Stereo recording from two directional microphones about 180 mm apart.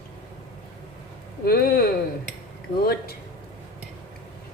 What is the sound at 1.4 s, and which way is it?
Speech, 55° left (ahead or behind).